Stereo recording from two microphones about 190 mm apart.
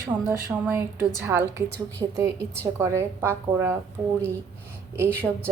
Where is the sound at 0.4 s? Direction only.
10° right (ahead or behind).